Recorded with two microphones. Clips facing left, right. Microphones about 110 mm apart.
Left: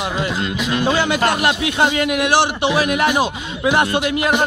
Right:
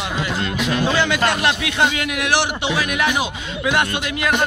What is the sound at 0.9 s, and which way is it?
Speech, 40° left (ahead or behind).